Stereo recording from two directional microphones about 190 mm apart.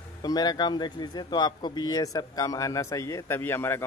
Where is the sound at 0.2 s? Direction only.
20° left (ahead or behind).